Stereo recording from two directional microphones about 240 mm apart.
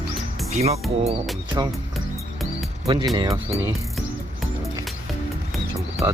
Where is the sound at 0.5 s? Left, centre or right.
Right.